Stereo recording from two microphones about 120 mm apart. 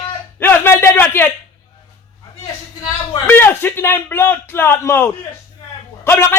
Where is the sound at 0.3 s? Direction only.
20° left (ahead or behind).